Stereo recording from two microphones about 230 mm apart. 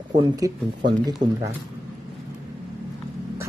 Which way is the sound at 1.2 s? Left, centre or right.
Right.